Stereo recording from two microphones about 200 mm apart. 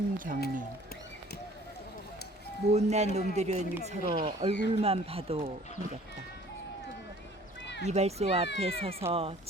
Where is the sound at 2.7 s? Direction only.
35° right (ahead or behind).